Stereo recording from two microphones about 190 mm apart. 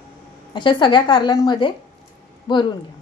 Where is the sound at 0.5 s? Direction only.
25° left (ahead or behind).